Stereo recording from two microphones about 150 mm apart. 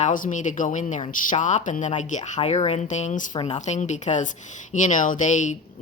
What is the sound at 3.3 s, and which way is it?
Speech, 30° left (ahead or behind).